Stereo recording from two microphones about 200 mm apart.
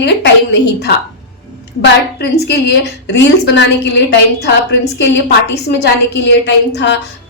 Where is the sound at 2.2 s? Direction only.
55° left (ahead or behind).